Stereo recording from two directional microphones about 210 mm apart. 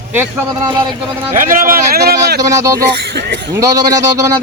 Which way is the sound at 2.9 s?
50° right (ahead or behind).